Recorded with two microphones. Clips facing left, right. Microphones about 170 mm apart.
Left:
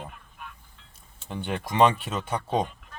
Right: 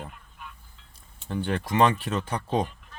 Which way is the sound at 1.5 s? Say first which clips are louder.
Right 2 dB; 20° left (ahead or behind).